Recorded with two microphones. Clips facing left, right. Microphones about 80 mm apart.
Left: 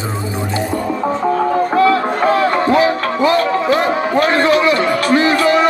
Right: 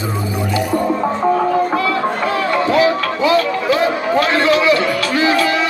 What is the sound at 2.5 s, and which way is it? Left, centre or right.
Music, left.